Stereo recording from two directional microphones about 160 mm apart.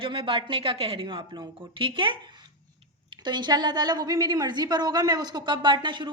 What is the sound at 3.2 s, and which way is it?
A woman's voice, 25° right (ahead or behind).